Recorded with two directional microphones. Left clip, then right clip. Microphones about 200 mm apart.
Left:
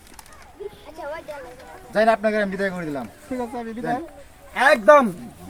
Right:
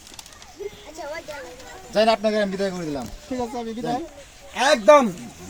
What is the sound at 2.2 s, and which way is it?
Speech, centre (ahead or behind).